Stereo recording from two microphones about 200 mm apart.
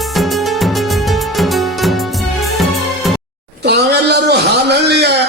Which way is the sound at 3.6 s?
55° right (ahead or behind).